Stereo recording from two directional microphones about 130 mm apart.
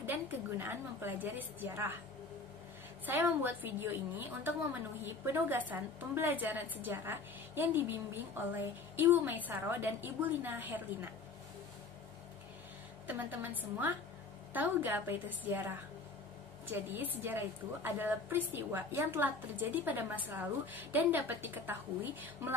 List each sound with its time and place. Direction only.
0.0 s a woman's voice: 15° right (ahead or behind)
3.1 s a woman's voice: 15° right (ahead or behind)
13.0 s a woman's voice: 15° right (ahead or behind)